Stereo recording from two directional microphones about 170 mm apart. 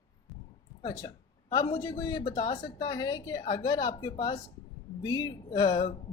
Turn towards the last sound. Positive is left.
turn(degrees=25)  # may be behind; listen again after turning